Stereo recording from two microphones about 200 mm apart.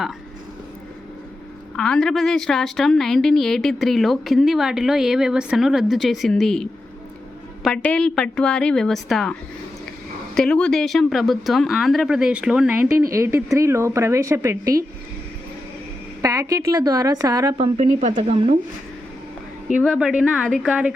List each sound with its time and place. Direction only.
1.7 s a woman's voice: 5° left (ahead or behind)
10.3 s a woman's voice: 5° left (ahead or behind); by 14.8 s 15° right (ahead or behind)
16.2 s a woman's voice: 15° right (ahead or behind)
17.7 s speech: 35° right (ahead or behind)
19.8 s a woman's voice: 5° right (ahead or behind)